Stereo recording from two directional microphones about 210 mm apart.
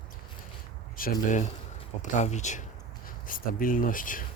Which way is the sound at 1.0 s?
35° left (ahead or behind).